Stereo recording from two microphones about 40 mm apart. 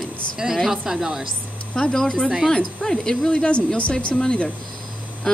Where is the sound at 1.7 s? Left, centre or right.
Centre; by 3.6 s left.